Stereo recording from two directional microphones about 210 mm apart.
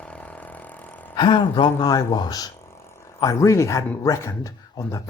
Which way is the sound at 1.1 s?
20° left (ahead or behind).